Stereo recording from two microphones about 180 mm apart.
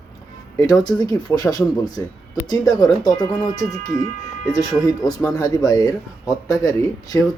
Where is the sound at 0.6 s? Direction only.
20° left (ahead or behind).